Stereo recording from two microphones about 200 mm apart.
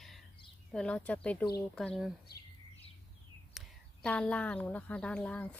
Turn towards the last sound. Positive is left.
turn(degrees=5)  # may be behind; listen again after turning